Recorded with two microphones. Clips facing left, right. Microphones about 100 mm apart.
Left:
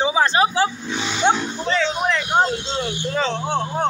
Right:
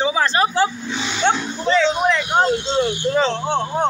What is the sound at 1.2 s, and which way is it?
Speech, 10° left (ahead or behind).